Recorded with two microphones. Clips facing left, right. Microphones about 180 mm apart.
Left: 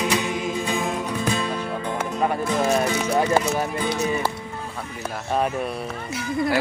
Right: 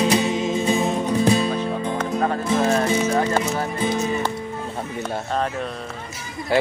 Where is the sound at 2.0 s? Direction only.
15° left (ahead or behind).